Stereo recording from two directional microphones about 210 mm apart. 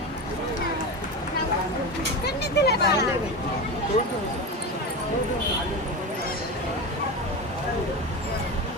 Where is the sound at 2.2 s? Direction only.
50° left (ahead or behind).